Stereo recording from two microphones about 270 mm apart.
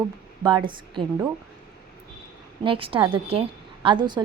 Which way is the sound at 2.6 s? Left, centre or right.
Centre.